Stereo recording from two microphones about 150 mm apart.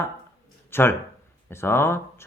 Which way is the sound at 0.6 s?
15° left (ahead or behind).